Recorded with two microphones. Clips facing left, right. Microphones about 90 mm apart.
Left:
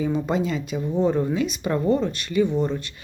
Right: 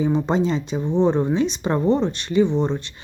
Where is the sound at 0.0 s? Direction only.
25° right (ahead or behind).